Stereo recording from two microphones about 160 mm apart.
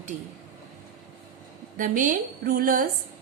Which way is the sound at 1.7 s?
55° right (ahead or behind).